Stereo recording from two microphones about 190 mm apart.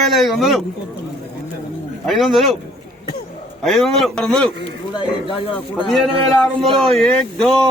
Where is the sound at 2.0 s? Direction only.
Centre (ahead or behind).